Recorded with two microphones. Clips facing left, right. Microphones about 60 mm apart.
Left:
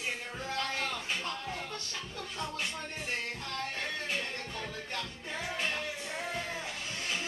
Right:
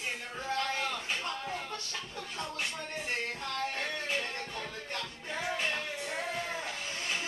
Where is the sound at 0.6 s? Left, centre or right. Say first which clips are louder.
Even; centre.